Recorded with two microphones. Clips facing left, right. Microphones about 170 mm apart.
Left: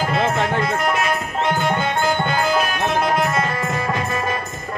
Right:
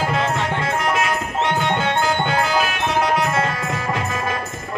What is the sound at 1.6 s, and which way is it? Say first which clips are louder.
Music: even; 90° right.